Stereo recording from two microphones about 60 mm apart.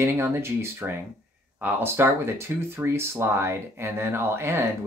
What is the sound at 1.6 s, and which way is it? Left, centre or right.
Speech, right.